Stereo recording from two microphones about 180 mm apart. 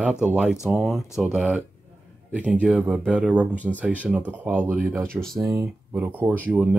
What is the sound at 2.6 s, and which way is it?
Speech, 5° right (ahead or behind).